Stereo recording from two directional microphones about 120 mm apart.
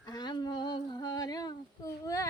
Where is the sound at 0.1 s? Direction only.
35° left (ahead or behind).